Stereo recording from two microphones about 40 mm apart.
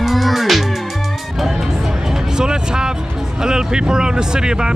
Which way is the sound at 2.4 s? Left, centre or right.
Centre.